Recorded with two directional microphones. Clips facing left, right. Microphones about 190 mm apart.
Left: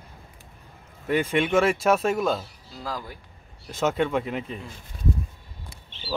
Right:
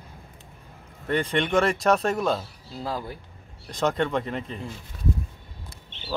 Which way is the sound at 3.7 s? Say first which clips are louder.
Left 1 dB; 5° left (ahead or behind).